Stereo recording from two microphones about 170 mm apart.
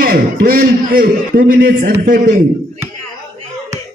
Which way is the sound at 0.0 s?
55° right (ahead or behind).